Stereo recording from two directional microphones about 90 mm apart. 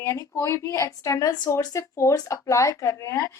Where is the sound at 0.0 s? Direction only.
30° left (ahead or behind).